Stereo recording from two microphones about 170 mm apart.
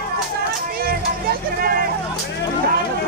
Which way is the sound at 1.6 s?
60° right (ahead or behind).